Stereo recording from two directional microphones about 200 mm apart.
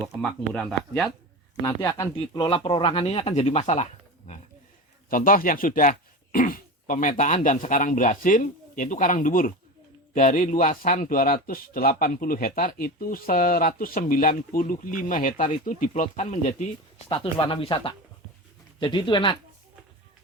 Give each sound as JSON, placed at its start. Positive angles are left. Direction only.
{"t": 0.0, "sound": "speech", "side_deg": 5}
{"t": 1.6, "sound": "speech", "side_deg": 15}
{"t": 5.0, "sound": "speech", "side_deg": 45}
{"t": 17.1, "sound": "speech", "side_deg": 25}